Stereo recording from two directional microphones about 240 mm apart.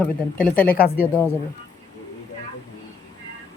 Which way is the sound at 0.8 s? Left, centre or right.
Left.